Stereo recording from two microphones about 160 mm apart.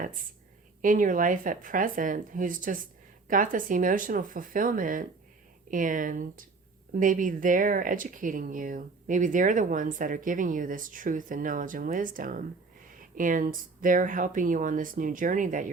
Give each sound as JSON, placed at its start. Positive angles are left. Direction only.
{"t": 0.0, "sound": "speech", "side_deg": -60}